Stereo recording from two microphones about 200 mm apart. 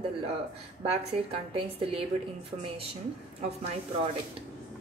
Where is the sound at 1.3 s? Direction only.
30° right (ahead or behind).